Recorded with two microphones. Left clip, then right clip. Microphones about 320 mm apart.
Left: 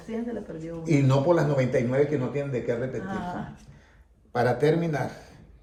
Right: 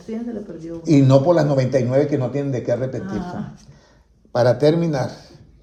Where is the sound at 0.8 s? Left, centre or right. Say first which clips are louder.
Right 8 dB; centre.